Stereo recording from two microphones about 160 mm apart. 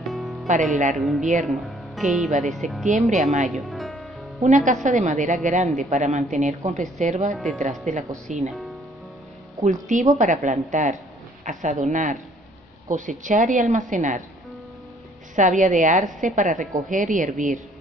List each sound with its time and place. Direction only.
0.0 s music: centre (ahead or behind)
0.9 s speech: centre (ahead or behind)
2.9 s a woman's voice: 50° right (ahead or behind)
3.4 s music: centre (ahead or behind)
4.4 s a woman's voice: 50° right (ahead or behind)
9.6 s a woman's voice: 50° right (ahead or behind)
15.3 s a woman's voice: 50° right (ahead or behind)